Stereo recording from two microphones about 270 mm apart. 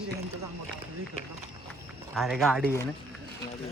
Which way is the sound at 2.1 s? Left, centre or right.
Centre.